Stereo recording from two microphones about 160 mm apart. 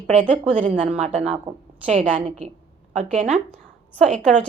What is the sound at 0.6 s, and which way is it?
Speech, 50° right (ahead or behind).